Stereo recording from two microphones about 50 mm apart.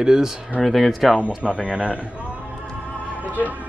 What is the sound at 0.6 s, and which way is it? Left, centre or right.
Speech, centre.